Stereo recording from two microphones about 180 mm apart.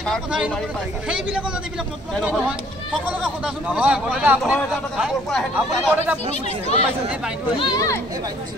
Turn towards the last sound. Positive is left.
turn(degrees=20)  # may be behind; listen again after turning